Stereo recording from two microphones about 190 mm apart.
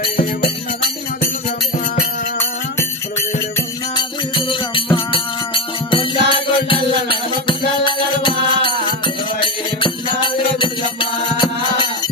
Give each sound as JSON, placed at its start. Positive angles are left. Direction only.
{"t": 3.9, "sound": "music", "side_deg": 25}